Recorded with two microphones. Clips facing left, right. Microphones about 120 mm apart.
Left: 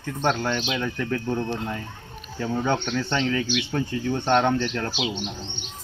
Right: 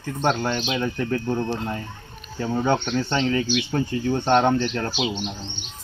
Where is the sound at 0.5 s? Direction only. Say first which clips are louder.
Right 1 dB; 30° right (ahead or behind).